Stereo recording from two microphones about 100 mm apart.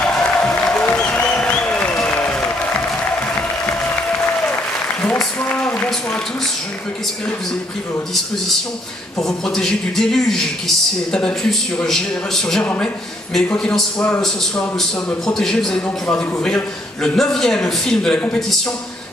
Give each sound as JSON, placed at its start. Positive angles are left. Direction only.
{"t": 0.1, "sound": "music", "side_deg": 10}
{"t": 0.8, "sound": "applause", "side_deg": 15}
{"t": 5.4, "sound": "a sound", "side_deg": 15}
{"t": 9.2, "sound": "a man's voice", "side_deg": 5}
{"t": 15.0, "sound": "a man's voice", "side_deg": 5}